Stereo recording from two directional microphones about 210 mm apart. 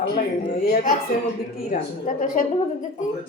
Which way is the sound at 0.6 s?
45° left (ahead or behind).